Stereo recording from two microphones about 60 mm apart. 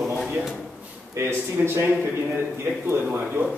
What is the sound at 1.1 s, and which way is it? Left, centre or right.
Speech, right.